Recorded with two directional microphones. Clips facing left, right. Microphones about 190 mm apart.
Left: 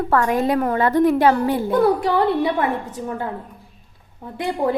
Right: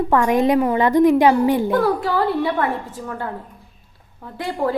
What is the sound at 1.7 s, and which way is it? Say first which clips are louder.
A woman's voice: left 2 dB; 20° left (ahead or behind).